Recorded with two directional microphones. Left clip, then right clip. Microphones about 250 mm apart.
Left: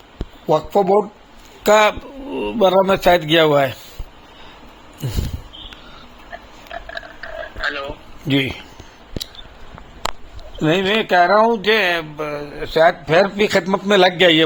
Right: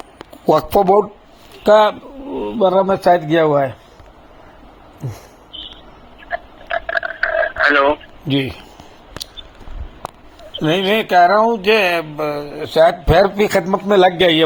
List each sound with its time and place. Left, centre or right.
0.2 s a sound: right
1.6 s a man's voice: centre
6.7 s a sound: right
10.6 s a man's voice: centre
12.1 s a man's voice: centre
13.1 s a man's voice: right